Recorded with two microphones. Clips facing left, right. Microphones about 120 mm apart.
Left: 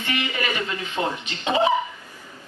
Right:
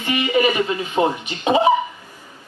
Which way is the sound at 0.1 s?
20° right (ahead or behind).